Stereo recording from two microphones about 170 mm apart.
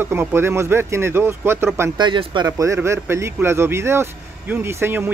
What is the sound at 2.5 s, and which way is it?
Speech, 15° right (ahead or behind).